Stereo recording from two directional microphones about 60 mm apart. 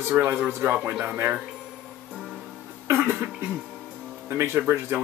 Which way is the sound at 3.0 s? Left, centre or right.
Right.